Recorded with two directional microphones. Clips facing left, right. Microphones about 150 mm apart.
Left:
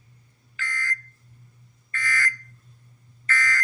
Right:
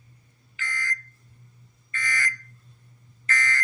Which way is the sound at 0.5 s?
20° right (ahead or behind).